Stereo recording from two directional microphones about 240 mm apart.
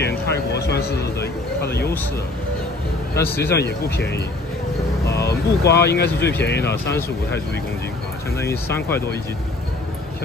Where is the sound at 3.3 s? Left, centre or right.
Left.